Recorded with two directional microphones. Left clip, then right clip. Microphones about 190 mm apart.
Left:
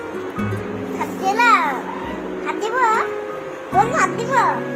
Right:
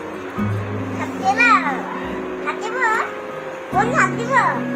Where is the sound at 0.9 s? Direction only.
60° left (ahead or behind).